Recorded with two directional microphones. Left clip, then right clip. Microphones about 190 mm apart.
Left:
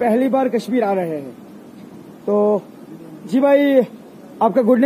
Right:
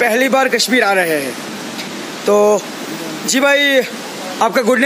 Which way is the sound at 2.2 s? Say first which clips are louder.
Right 5 dB; 25° right (ahead or behind).